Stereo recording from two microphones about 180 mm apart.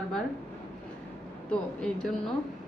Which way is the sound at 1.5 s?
5° left (ahead or behind).